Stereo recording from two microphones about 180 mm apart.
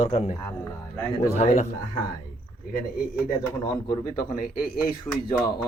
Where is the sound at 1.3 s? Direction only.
40° left (ahead or behind).